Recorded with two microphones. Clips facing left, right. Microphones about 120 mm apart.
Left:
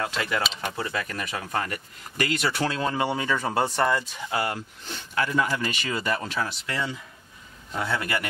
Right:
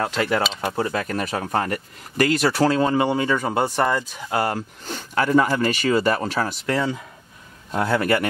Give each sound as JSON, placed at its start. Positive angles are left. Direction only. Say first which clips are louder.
{"t": 0.0, "sound": "speech", "louder": "right 6 dB", "side_deg": -35}
{"t": 3.3, "sound": "speech", "louder": "right 3 dB", "side_deg": -20}
{"t": 4.3, "sound": "speech", "louder": "right 5 dB", "side_deg": -40}